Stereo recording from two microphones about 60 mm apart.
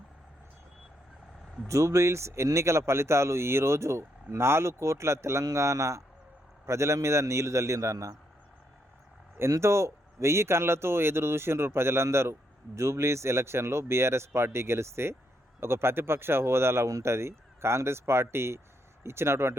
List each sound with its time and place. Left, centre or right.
1.6 s a man's voice: right
9.6 s speech: right